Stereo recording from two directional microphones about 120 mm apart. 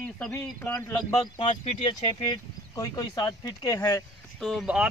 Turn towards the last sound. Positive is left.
turn(degrees=0)  # may be behind; listen again after turning